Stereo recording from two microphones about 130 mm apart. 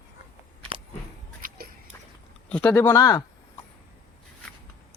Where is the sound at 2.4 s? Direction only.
10° left (ahead or behind).